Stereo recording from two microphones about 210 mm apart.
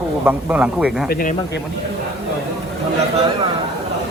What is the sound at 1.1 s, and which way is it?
Speech, 45° left (ahead or behind).